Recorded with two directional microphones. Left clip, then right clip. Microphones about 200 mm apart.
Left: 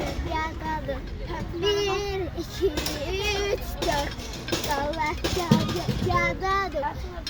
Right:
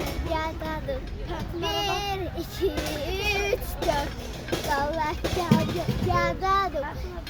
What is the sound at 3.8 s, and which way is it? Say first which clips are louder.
Vehicle: even; 55° left (ahead or behind).